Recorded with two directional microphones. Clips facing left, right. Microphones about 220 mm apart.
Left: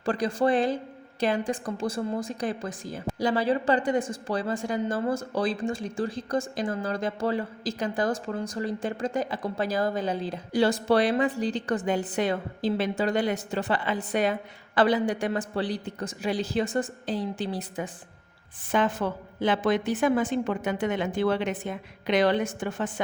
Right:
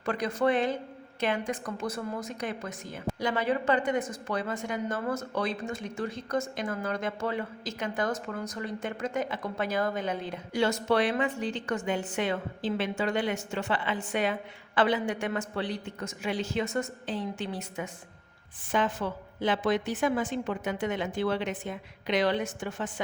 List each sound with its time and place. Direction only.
0.0 s a woman's voice: 30° left (ahead or behind)
18.7 s a woman's voice: 55° left (ahead or behind)